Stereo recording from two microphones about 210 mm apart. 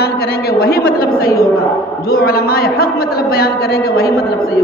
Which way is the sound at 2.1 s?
45° left (ahead or behind).